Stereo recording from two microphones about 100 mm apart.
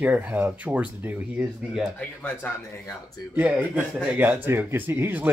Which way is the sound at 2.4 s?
20° left (ahead or behind).